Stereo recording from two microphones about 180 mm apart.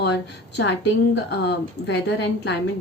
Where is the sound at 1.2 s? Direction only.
75° left (ahead or behind).